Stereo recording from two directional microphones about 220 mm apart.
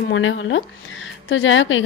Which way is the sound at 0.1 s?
60° left (ahead or behind).